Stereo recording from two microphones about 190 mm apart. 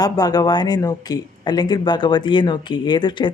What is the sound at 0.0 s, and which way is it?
Speech, 20° left (ahead or behind).